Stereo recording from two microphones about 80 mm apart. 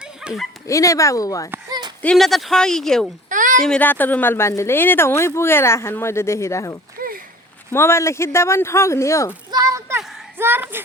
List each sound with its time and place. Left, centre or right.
0.2 s bow-wow: centre
0.7 s speech: left
2.1 s speech: centre
3.8 s speech: left
9.5 s a sound: right
10.3 s a sound: right